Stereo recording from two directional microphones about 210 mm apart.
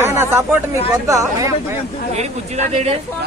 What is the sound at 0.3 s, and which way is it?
A man's voice, 10° right (ahead or behind).